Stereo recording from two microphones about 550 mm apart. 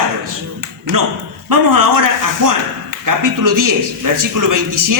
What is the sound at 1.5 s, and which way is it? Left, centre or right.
A man's voice, right.